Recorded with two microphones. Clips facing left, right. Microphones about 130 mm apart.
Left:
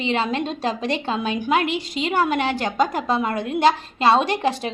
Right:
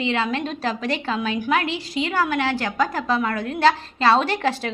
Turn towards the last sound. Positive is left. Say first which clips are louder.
# left 1 dB
turn(degrees=20)  # may be behind; listen again after turning